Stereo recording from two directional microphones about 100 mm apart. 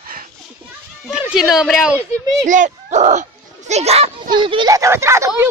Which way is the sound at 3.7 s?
90° right.